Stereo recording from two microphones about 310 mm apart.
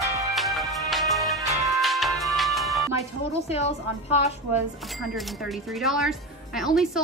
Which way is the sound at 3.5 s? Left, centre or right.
Centre.